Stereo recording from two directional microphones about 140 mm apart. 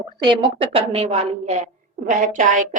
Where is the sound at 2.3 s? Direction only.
65° right (ahead or behind).